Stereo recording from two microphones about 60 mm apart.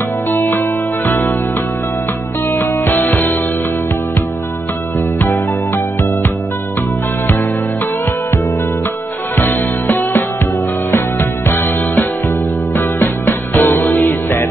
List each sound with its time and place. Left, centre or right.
0.3 s music: left
2.6 s music: left
9.4 s music: left